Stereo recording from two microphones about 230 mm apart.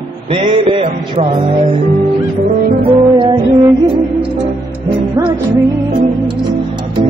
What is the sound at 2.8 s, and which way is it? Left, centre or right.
Music, right.